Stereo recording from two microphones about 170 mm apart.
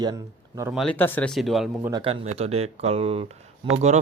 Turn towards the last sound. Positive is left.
turn(degrees=-40)  # may be behind; listen again after turning